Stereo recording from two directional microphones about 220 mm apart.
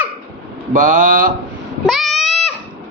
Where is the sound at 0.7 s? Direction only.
35° right (ahead or behind).